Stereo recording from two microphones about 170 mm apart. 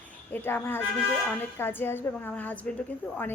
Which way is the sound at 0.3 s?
10° left (ahead or behind).